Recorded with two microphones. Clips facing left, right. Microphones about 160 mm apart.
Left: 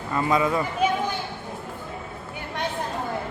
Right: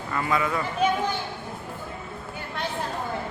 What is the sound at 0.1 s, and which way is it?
Speech, 25° left (ahead or behind).